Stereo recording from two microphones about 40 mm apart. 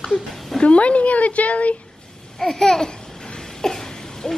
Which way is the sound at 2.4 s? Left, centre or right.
Centre.